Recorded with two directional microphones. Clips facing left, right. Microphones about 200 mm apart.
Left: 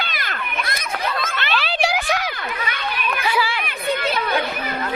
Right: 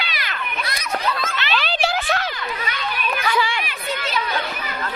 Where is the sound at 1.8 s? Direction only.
10° left (ahead or behind).